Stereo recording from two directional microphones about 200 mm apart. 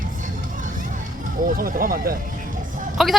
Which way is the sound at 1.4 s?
45° right (ahead or behind).